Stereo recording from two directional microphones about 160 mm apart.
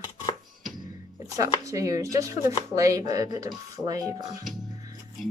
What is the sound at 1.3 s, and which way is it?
Speech, 20° right (ahead or behind).